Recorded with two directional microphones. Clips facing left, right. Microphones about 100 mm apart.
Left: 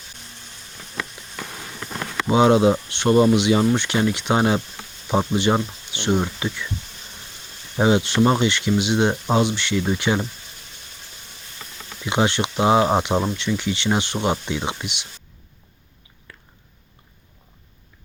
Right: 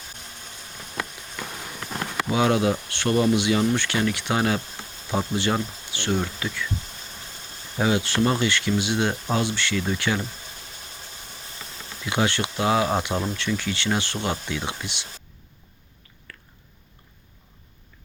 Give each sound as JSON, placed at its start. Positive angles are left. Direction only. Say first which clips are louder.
{"t": 2.2, "sound": "speech", "louder": "left 6 dB", "side_deg": 25}
{"t": 7.8, "sound": "speech", "louder": "left 5 dB", "side_deg": 25}
{"t": 12.0, "sound": "speech", "louder": "left 3 dB", "side_deg": 20}